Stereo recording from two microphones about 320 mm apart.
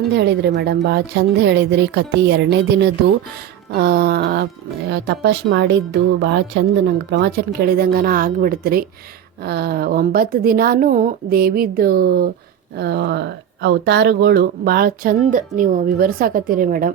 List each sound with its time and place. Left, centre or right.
0.1 s speech: right
3.8 s speech: right